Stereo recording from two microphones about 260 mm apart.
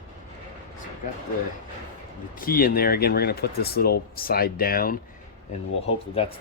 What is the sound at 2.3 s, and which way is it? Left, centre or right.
Speech, left.